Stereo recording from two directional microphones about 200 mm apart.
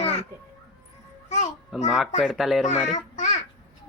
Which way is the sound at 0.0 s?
30° left (ahead or behind).